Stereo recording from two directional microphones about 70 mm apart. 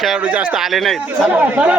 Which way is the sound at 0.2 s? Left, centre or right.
Centre.